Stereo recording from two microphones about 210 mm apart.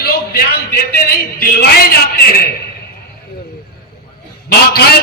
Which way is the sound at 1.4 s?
45° left (ahead or behind).